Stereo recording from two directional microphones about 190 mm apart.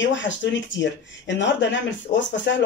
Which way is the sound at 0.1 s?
75° left (ahead or behind).